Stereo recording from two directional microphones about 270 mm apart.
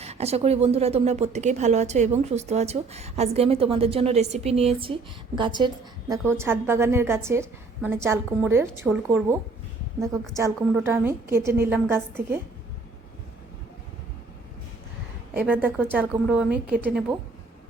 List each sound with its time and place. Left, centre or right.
0.0 s a woman's voice: right
15.4 s a woman's voice: centre